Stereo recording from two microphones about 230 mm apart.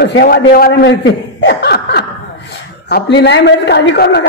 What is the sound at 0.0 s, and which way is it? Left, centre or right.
A man's voice, left.